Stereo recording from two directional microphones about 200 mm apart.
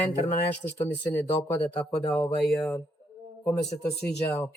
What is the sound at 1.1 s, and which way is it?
Speech, 5° left (ahead or behind).